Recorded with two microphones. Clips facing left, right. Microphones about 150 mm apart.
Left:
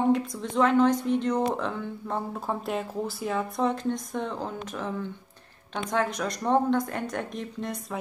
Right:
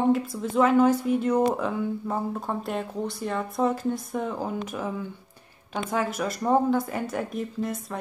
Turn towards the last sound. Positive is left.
turn(degrees=0)  # may be behind; listen again after turning